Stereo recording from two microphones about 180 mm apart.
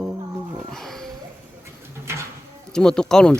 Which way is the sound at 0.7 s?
Centre (ahead or behind).